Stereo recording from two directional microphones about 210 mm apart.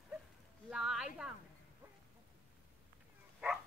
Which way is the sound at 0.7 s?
Centre (ahead or behind).